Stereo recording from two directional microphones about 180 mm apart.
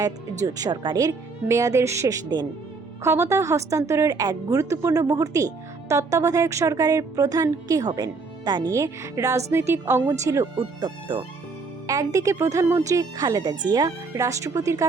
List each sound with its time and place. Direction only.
0.4 s a woman's voice: 20° right (ahead or behind)